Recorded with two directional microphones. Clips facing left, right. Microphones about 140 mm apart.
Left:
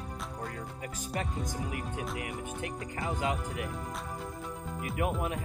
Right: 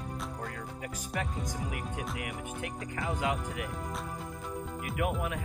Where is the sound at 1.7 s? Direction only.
30° left (ahead or behind).